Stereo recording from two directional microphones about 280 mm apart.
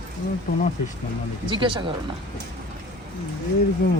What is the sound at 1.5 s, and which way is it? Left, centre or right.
Speech, centre.